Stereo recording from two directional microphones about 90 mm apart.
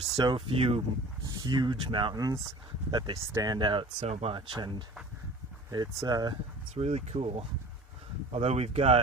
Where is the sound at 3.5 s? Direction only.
60° right (ahead or behind).